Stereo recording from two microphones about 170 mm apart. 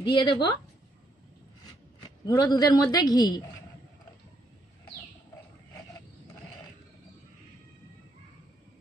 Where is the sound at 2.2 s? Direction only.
25° left (ahead or behind).